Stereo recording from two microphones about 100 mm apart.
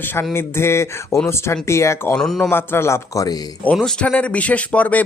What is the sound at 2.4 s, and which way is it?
Speech, 20° left (ahead or behind).